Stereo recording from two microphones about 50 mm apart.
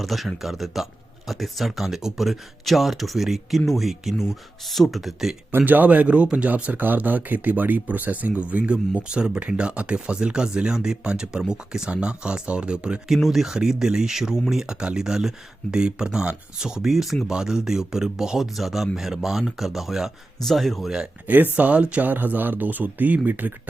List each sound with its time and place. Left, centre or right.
0.0 s speech: centre
5.5 s speech: right
13.2 s speech: centre
21.2 s speech: right
21.5 s speech: right
22.0 s speech: right